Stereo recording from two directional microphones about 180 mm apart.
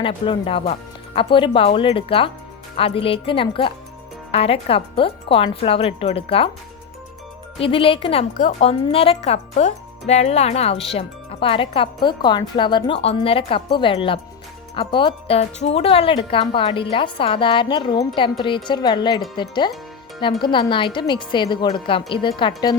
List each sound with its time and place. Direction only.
0.0 s speech: 30° left (ahead or behind)
7.6 s speech: 30° left (ahead or behind)
8.3 s speech: 45° left (ahead or behind); by 22.7 s 25° left (ahead or behind)